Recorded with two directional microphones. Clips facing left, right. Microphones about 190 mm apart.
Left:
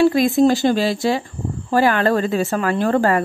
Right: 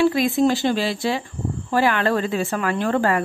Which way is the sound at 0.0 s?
40° left (ahead or behind).